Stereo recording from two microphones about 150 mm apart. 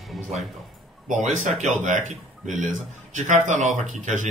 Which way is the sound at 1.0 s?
55° right (ahead or behind).